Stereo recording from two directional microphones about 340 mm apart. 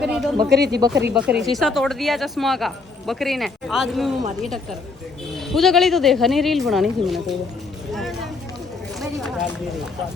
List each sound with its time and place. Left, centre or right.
0.0 s a woman's voice: centre
0.5 s speech: right
1.1 s a woman's voice: centre
5.5 s a woman's voice: centre
7.9 s a sound: centre